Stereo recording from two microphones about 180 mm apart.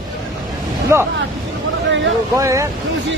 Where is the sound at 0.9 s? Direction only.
15° right (ahead or behind).